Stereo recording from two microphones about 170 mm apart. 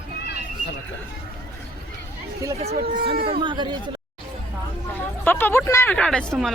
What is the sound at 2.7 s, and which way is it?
Speech, 60° right (ahead or behind).